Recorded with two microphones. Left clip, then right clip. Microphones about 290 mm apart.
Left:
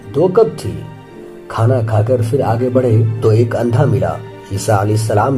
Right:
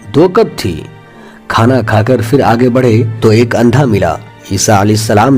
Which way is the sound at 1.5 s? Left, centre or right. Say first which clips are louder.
Right 7 dB; right.